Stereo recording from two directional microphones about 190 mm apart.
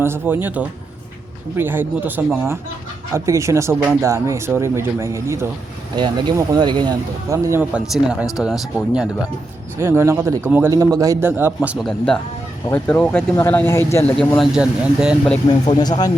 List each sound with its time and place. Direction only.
0.0 s speech: 10° right (ahead or behind)
15.4 s speech: 20° left (ahead or behind)